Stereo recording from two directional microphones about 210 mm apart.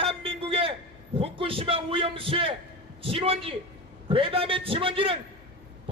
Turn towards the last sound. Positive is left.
turn(degrees=-25)  # may be behind; listen again after turning